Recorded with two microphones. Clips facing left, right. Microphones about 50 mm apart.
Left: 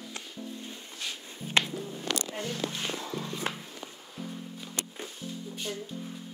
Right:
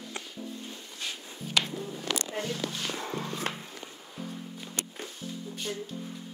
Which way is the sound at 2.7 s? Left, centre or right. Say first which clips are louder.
Even; left.